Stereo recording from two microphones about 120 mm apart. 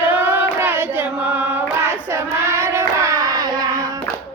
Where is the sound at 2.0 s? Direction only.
20° right (ahead or behind).